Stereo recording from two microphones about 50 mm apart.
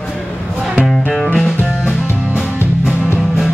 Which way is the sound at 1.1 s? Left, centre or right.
Centre.